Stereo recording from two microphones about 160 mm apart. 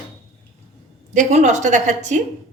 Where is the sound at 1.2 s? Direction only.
50° right (ahead or behind).